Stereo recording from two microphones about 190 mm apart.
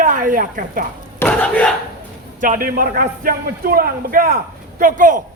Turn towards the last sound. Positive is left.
turn(degrees=-45)  # may be behind; listen again after turning